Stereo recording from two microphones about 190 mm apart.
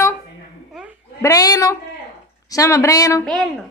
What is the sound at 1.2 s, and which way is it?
A woman's voice, 20° left (ahead or behind).